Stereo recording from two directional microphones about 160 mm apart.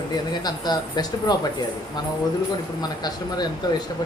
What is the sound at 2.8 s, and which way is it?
Speech, 25° left (ahead or behind).